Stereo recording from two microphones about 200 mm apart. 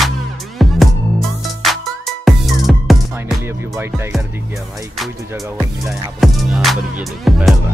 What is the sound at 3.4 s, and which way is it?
Music, 15° right (ahead or behind).